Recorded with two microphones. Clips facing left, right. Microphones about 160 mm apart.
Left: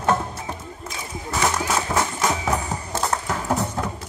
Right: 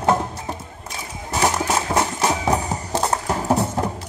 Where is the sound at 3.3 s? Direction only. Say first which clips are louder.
Right 4 dB; 30° right (ahead or behind).